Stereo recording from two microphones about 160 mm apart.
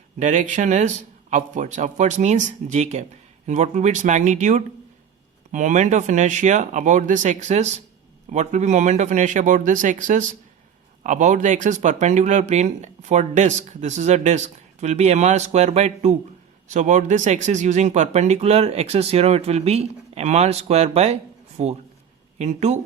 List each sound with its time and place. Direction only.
0.2 s speech: 50° right (ahead or behind)